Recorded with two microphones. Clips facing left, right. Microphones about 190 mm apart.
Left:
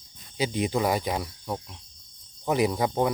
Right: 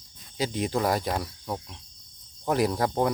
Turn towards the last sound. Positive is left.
turn(degrees=0)  # may be behind; listen again after turning